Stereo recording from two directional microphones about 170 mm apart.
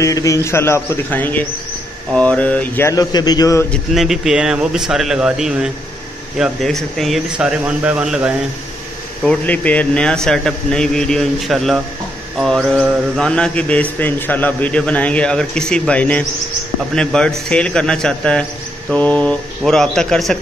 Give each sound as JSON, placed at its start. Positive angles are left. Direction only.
{"t": 0.0, "sound": "mantra", "side_deg": 20}
{"t": 3.7, "sound": "speech", "side_deg": 0}
{"t": 9.2, "sound": "speech", "side_deg": 5}
{"t": 12.4, "sound": "mantra", "side_deg": 0}
{"t": 16.9, "sound": "speech", "side_deg": 5}